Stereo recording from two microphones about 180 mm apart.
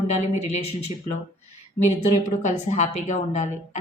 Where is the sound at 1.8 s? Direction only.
10° left (ahead or behind).